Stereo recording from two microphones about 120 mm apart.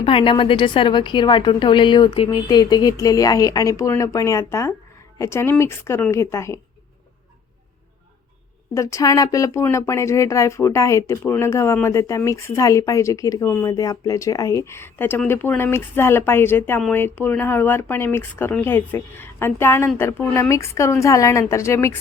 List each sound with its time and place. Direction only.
0.0 s a woman's voice: 50° left (ahead or behind); by 6.6 s 25° left (ahead or behind)
8.7 s speech: 25° left (ahead or behind)